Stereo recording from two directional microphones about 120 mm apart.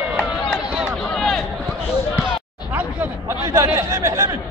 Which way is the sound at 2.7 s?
15° right (ahead or behind).